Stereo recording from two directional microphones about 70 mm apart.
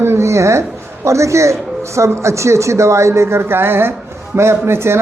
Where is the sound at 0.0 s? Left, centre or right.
Right.